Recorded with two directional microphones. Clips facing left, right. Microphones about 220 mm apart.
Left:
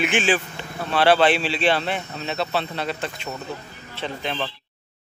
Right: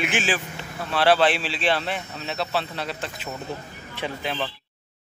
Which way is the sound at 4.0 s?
15° right (ahead or behind).